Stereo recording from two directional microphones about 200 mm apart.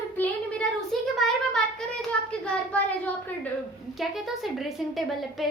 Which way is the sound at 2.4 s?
5° left (ahead or behind).